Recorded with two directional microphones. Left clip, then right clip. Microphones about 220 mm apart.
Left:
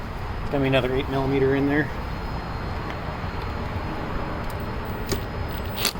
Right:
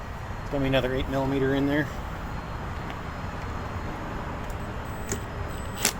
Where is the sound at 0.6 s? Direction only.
25° right (ahead or behind).